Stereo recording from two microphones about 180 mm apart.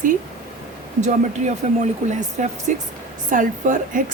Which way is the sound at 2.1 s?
40° right (ahead or behind).